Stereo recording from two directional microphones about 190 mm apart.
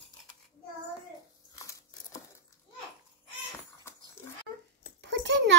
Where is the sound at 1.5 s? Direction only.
15° left (ahead or behind).